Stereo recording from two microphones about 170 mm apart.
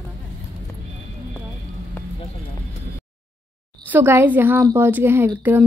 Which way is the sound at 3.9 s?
15° right (ahead or behind).